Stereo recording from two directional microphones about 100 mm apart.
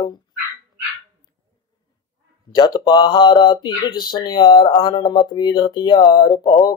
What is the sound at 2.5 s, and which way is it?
Speech, 45° left (ahead or behind).